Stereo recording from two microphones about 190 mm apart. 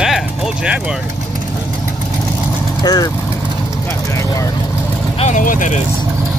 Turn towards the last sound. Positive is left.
turn(degrees=45)  # may be behind; listen again after turning